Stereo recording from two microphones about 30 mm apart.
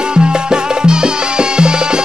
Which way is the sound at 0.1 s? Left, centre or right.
Right.